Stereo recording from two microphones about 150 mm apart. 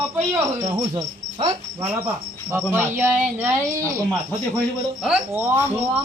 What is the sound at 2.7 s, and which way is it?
Speech, 15° right (ahead or behind).